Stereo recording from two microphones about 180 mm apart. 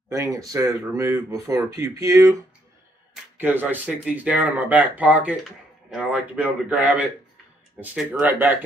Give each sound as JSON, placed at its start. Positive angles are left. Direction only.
{"t": 0.1, "sound": "speech", "side_deg": -20}
{"t": 3.3, "sound": "speech", "side_deg": -10}